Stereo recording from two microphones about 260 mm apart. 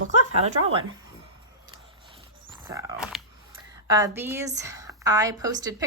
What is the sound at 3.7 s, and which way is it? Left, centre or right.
A woman's voice, centre.